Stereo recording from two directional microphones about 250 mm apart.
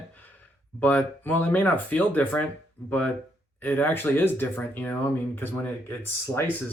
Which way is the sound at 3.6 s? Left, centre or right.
Centre.